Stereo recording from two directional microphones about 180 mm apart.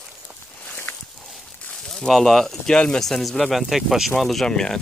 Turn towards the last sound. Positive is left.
turn(degrees=5)  # may be behind; listen again after turning